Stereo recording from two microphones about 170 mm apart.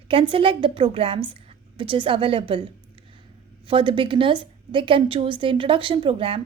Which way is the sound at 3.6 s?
30° right (ahead or behind).